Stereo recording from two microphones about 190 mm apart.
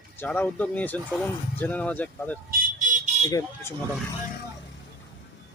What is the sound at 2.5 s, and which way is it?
Vehicle, 45° right (ahead or behind).